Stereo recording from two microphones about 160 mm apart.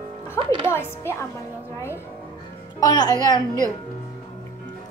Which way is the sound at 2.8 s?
25° left (ahead or behind).